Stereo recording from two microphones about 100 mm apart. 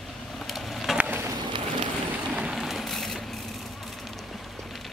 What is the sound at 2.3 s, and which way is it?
Vehicle, 10° right (ahead or behind).